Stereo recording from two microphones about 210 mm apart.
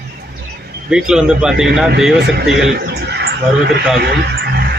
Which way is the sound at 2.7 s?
50° right (ahead or behind).